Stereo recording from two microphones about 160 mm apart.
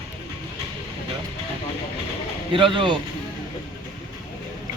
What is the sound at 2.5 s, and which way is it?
Speech, 30° right (ahead or behind).